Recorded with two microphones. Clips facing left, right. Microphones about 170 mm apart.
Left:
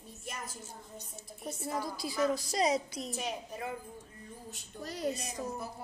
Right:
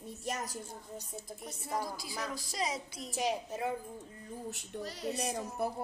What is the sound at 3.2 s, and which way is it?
Speech, 30° right (ahead or behind).